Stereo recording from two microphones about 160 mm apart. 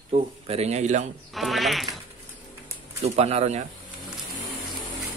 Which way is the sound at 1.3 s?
Centre (ahead or behind).